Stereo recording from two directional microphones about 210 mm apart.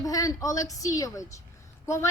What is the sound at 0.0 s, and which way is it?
A woman's voice, 15° left (ahead or behind).